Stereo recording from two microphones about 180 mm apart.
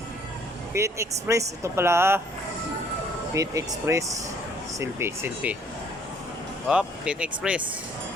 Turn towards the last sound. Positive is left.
turn(degrees=-5)  # may be behind; listen again after turning